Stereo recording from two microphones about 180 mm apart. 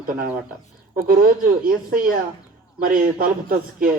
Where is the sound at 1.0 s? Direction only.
50° right (ahead or behind).